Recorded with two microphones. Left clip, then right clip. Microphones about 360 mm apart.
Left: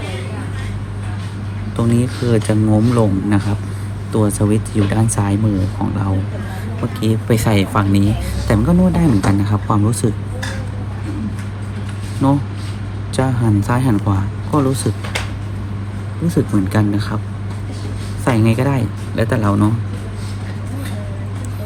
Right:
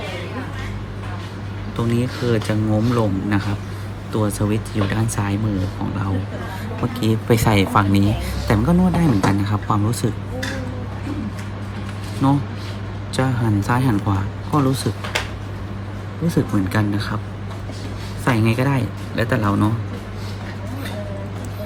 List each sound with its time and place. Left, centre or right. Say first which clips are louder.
1.7 s a man's voice: left 4 dB; centre
12.2 s a man's voice: left 3 dB; centre
16.2 s a man's voice: left 3 dB; centre
18.3 s a man's voice: left 3 dB; centre